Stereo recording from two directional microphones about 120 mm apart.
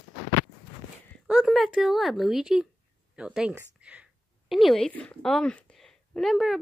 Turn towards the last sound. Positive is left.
turn(degrees=0)  # may be behind; listen again after turning